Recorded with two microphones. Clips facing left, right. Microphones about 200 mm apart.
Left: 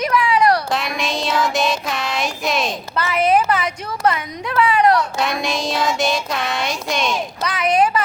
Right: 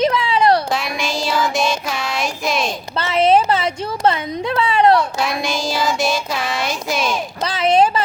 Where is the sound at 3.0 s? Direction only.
25° right (ahead or behind).